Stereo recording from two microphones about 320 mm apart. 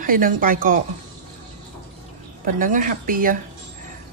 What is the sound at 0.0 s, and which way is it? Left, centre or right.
Speech, right.